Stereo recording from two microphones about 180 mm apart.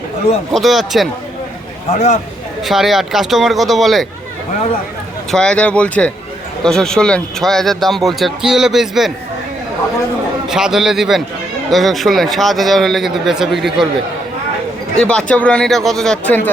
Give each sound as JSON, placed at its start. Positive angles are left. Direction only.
{"t": 0.5, "sound": "speech", "side_deg": 0}
{"t": 1.9, "sound": "speech", "side_deg": 40}
{"t": 2.6, "sound": "speech", "side_deg": 0}
{"t": 5.3, "sound": "speech", "side_deg": 5}
{"t": 10.5, "sound": "speech", "side_deg": -5}
{"t": 14.9, "sound": "speech", "side_deg": 5}